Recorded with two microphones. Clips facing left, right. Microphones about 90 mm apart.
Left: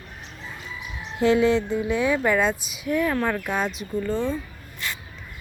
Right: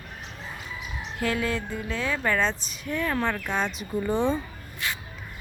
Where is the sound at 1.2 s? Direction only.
20° left (ahead or behind); by 3.8 s 5° left (ahead or behind).